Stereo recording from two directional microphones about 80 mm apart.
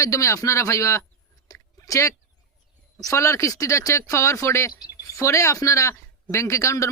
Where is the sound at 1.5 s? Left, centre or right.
Left.